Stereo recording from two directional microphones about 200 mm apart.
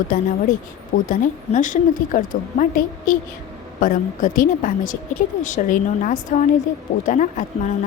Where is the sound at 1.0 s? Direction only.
40° left (ahead or behind).